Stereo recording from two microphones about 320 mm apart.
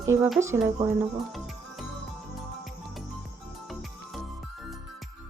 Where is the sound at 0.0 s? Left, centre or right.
Centre.